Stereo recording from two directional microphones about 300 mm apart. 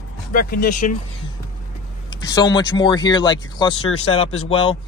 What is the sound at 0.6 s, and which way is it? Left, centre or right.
Speech, left.